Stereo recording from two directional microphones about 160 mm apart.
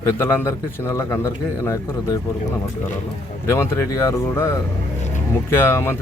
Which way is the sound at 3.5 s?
15° left (ahead or behind).